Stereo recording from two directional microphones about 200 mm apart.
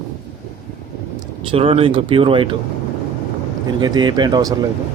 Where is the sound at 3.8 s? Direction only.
20° right (ahead or behind).